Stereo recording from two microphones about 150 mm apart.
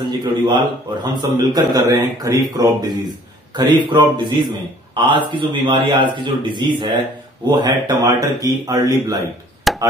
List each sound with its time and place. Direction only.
0.0 s a man's voice: 30° right (ahead or behind)
9.7 s chop: centre (ahead or behind)